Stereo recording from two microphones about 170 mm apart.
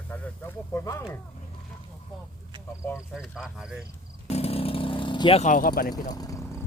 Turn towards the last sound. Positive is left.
turn(degrees=20)  # may be behind; listen again after turning